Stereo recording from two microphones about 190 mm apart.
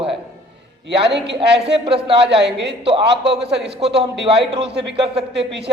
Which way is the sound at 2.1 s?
65° right (ahead or behind).